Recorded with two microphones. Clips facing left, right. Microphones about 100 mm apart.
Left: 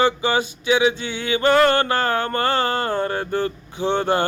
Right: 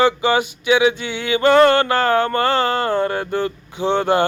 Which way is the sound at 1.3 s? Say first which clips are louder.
Right 4 dB; 30° right (ahead or behind).